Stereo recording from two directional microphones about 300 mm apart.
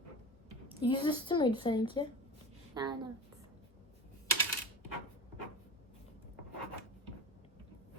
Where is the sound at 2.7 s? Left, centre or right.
Centre.